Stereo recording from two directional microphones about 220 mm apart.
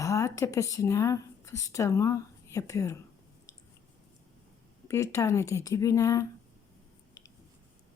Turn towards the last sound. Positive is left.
turn(degrees=15)  # may be behind; listen again after turning